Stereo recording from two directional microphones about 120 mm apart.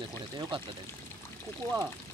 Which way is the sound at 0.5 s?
45° right (ahead or behind).